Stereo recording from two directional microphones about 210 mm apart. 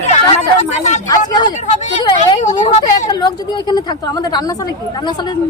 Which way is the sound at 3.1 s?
20° left (ahead or behind).